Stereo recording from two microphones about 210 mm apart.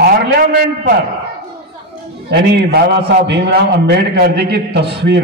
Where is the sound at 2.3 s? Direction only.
55° right (ahead or behind).